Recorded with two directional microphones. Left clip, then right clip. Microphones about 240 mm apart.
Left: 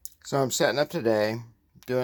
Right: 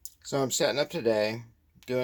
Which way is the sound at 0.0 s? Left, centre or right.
Centre.